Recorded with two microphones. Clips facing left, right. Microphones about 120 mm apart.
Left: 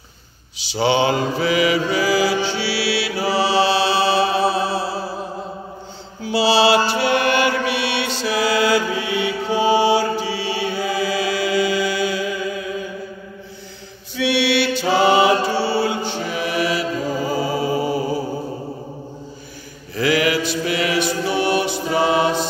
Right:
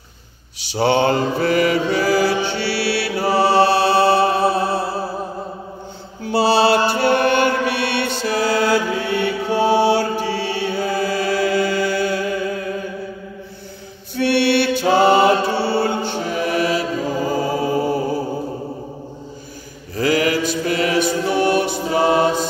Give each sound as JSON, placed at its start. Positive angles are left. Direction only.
{"t": 0.6, "sound": "mantra", "side_deg": -60}
{"t": 6.2, "sound": "mantra", "side_deg": -55}
{"t": 14.1, "sound": "mantra", "side_deg": -55}
{"t": 17.6, "sound": "music", "side_deg": 5}
{"t": 20.0, "sound": "mantra", "side_deg": -40}
{"t": 21.9, "sound": "choir", "side_deg": -45}